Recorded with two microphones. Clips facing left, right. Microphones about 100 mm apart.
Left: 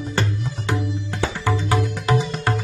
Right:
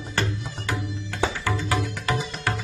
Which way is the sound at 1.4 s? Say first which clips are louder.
Left 4 dB; 25° left (ahead or behind).